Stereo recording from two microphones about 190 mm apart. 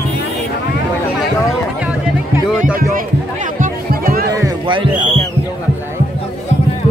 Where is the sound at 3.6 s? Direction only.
50° right (ahead or behind).